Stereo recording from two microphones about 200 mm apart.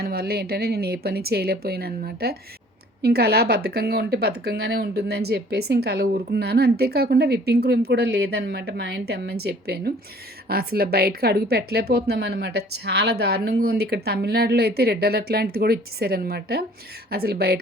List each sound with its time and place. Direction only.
0.0 s a woman's voice: 50° right (ahead or behind)